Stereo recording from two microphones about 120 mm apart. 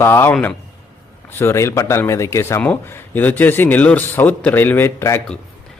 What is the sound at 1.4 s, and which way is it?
Speech, 20° left (ahead or behind).